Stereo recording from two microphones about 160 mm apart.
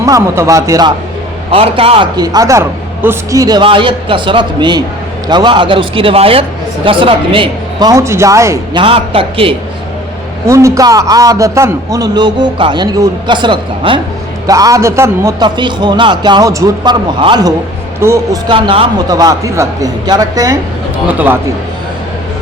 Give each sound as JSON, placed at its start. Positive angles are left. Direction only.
{"t": 0.0, "sound": "a man's voice", "side_deg": -20}
{"t": 1.5, "sound": "a man's voice", "side_deg": -35}
{"t": 8.7, "sound": "speech", "side_deg": -35}
{"t": 10.4, "sound": "a man's voice", "side_deg": -20}
{"t": 21.1, "sound": "speech", "side_deg": -10}